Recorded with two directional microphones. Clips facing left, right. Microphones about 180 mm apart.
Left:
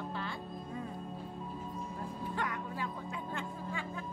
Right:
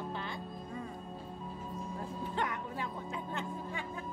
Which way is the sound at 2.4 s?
25° right (ahead or behind).